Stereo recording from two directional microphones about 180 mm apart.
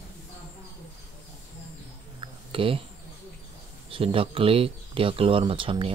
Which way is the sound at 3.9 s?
30° right (ahead or behind).